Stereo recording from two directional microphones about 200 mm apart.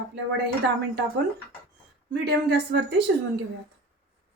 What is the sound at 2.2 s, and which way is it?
Speech, 60° right (ahead or behind).